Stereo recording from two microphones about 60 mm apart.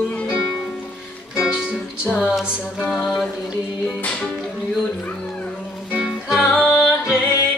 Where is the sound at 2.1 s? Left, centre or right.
Centre.